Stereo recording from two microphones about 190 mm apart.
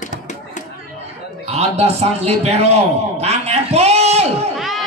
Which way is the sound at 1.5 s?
35° right (ahead or behind).